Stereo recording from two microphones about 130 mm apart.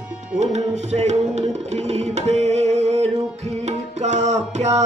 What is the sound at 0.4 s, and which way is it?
Music, 60° right (ahead or behind).